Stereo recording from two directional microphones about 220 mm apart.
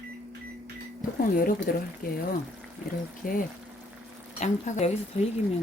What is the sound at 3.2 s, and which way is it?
Speech, 40° left (ahead or behind).